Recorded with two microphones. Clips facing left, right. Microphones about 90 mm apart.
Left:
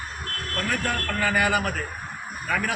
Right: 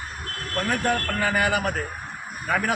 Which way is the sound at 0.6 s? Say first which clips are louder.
Right 3 dB; 25° right (ahead or behind).